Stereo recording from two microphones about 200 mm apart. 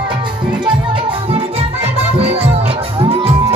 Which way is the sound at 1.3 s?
30° right (ahead or behind).